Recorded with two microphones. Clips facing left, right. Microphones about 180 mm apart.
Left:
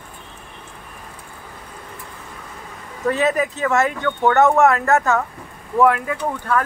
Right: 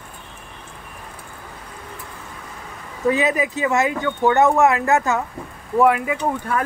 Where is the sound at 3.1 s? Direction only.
10° right (ahead or behind).